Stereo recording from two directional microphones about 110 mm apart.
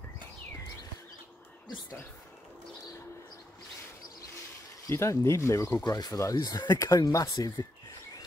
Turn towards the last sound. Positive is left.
turn(degrees=35)  # may be behind; listen again after turning